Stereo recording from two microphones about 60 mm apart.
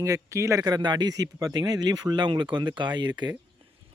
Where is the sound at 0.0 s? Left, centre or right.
Right.